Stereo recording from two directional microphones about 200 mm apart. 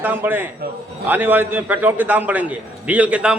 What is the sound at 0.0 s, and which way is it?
A man's voice, 10° right (ahead or behind).